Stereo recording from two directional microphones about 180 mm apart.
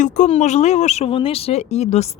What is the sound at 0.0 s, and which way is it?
A woman's voice, 45° left (ahead or behind).